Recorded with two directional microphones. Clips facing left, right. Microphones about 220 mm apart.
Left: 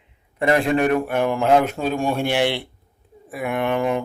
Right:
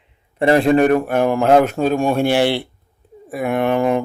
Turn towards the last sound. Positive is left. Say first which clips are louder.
# right 5 dB
turn(degrees=-40)  # may be behind; listen again after turning